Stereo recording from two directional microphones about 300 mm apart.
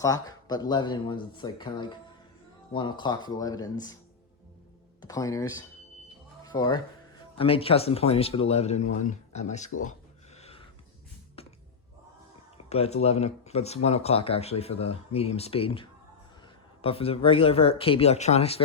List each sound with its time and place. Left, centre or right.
0.0 s speech: centre
5.0 s speech: centre
10.3 s a sound: left
12.6 s speech: left